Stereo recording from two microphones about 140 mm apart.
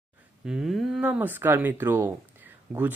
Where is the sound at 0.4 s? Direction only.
5° right (ahead or behind).